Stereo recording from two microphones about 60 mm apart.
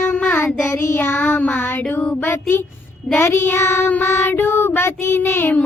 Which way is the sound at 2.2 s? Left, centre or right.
Left.